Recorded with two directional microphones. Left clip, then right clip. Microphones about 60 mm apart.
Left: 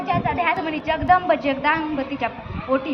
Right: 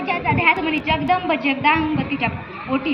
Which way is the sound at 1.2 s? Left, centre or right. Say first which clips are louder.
Right 1 dB; left.